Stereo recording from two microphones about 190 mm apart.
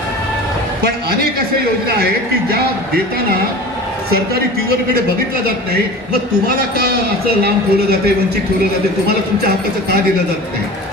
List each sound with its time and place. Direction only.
6.6 s a man's voice: 55° right (ahead or behind)